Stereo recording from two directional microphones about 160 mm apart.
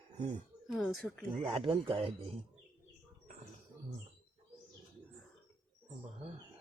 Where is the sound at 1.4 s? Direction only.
35° right (ahead or behind).